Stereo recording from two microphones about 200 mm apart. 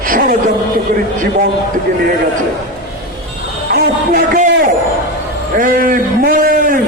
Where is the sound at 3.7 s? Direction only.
45° right (ahead or behind).